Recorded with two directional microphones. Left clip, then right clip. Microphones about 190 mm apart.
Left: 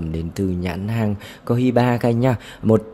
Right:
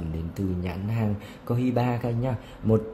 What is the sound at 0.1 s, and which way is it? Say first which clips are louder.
Speech: left 8 dB; 45° left (ahead or behind).